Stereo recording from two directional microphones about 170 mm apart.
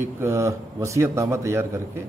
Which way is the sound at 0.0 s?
15° right (ahead or behind).